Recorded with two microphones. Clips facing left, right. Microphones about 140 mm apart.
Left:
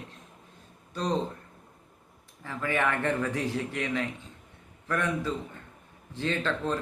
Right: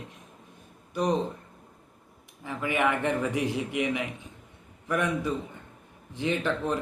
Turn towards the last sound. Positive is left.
turn(degrees=-15)  # may be behind; listen again after turning